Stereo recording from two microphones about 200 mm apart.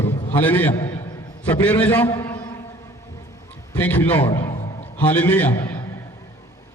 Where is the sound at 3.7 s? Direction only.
5° left (ahead or behind).